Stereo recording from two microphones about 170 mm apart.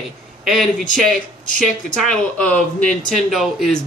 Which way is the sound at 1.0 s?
5° left (ahead or behind).